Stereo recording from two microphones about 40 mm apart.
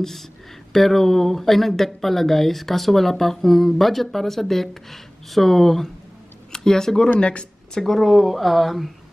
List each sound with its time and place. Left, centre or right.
0.0 s speech: centre
7.2 s speech: left
7.8 s speech: centre